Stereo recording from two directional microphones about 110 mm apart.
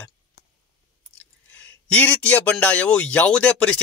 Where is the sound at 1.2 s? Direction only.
15° left (ahead or behind).